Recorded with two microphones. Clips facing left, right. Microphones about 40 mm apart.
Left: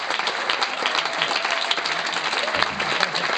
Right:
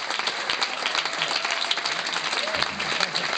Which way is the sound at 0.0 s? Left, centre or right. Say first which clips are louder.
Left 4 dB; centre.